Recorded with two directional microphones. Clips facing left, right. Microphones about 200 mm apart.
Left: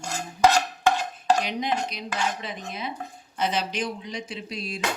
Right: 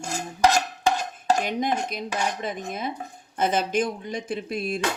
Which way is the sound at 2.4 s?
50° right (ahead or behind).